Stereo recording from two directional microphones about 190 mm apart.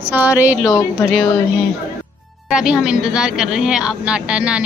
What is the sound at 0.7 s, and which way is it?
Speech, 15° left (ahead or behind).